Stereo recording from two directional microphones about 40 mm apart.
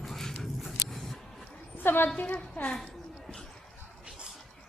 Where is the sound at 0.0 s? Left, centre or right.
Centre.